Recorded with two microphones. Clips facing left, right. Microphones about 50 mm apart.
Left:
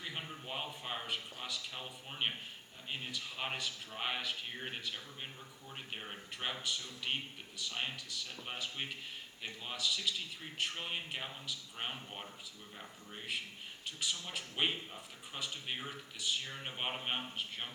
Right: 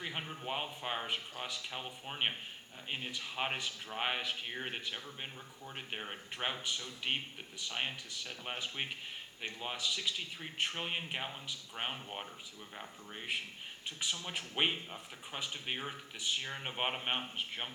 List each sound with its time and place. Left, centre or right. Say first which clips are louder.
0.0 s speech: right 3 dB; right
14.0 s speech: right 1 dB; right